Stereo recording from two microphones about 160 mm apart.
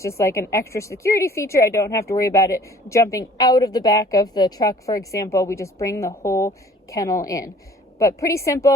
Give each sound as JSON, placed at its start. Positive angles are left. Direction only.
{"t": 0.0, "sound": "speech", "side_deg": 20}